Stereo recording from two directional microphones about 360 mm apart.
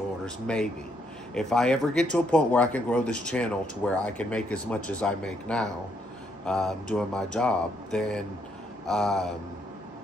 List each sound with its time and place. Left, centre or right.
1.3 s speech: centre